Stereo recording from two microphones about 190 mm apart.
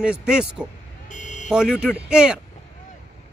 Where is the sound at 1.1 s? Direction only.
40° left (ahead or behind).